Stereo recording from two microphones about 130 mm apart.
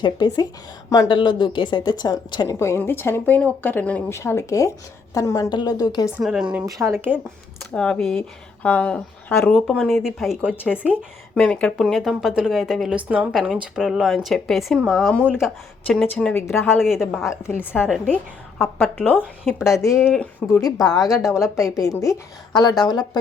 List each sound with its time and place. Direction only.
0.0 s a woman's voice: 35° left (ahead or behind)
2.6 s a woman's voice: 20° left (ahead or behind)
6.1 s speech: 5° right (ahead or behind)
6.7 s speech: 20° right (ahead or behind)
7.7 s speech: 5° left (ahead or behind)
11.3 s speech: 10° left (ahead or behind)
16.3 s speech: 15° left (ahead or behind)
16.8 s speech: 5° right (ahead or behind)
17.2 s speech: 20° left (ahead or behind)
17.7 s speech: 5° right (ahead or behind)
19.7 s a woman's voice: 25° left (ahead or behind)